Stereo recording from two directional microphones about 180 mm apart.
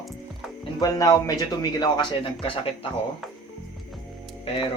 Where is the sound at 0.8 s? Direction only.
20° left (ahead or behind).